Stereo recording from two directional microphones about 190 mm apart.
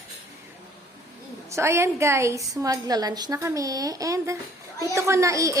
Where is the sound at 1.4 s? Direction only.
15° right (ahead or behind).